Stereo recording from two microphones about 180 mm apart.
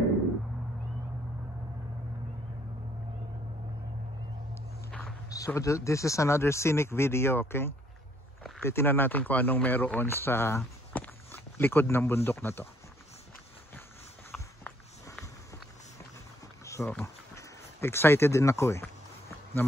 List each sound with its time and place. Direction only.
5.3 s speech: 20° left (ahead or behind)
14.3 s walk: 5° left (ahead or behind)
16.6 s a sound: 15° left (ahead or behind)